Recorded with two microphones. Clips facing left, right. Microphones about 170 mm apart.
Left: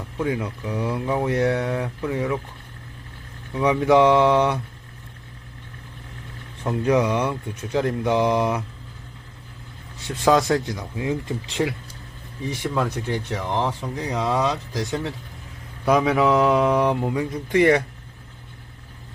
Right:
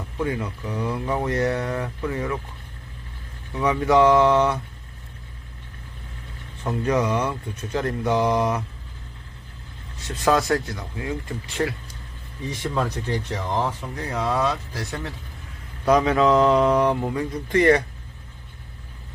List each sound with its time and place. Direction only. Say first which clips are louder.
0.2 s speech: left 1 dB; 10° left (ahead or behind)
3.5 s speech: left 2 dB; 10° left (ahead or behind)
6.7 s speech: left 2 dB; 10° left (ahead or behind)
10.2 s speech: left 2 dB; 15° left (ahead or behind)
11.6 s speech: even; 10° left (ahead or behind)